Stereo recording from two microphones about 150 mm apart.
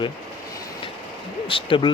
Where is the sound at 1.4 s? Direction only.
35° left (ahead or behind).